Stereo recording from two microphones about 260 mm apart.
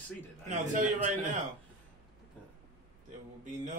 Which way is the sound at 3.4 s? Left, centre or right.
Right.